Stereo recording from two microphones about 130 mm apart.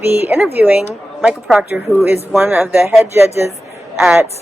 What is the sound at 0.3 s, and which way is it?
A woman's voice, 15° right (ahead or behind).